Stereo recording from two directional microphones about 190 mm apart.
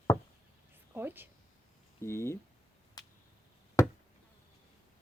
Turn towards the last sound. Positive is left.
turn(degrees=15)  # may be behind; listen again after turning